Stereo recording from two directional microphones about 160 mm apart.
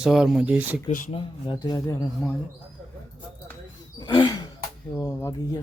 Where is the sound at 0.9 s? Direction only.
50° left (ahead or behind).